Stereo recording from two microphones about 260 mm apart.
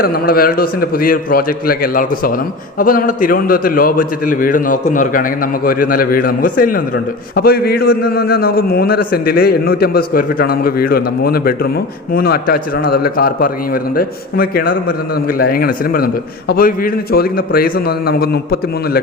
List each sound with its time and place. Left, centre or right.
0.0 s a man's voice: left